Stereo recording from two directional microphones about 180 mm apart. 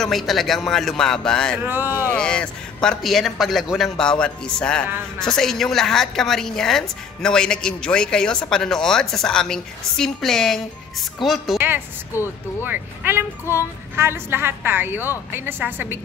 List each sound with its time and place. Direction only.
0.0 s a woman's voice: centre (ahead or behind)
1.6 s a woman's voice: 10° right (ahead or behind)
2.1 s a woman's voice: 5° left (ahead or behind)
11.5 s a sound: 10° right (ahead or behind)
12.6 s a woman's voice: 10° right (ahead or behind)